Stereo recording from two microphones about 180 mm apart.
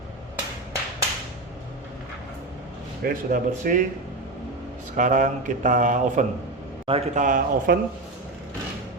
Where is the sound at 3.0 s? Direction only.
50° right (ahead or behind).